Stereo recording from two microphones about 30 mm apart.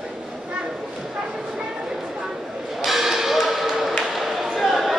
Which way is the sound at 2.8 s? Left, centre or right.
Centre.